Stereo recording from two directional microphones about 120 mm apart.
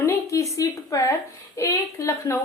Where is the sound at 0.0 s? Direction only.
25° left (ahead or behind).